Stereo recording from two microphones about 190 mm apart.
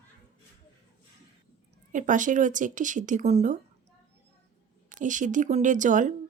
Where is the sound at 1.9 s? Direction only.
40° right (ahead or behind).